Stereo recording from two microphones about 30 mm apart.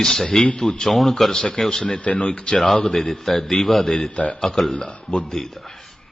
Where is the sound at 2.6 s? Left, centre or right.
Centre.